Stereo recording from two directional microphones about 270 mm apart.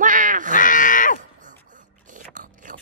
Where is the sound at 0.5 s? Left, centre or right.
Left.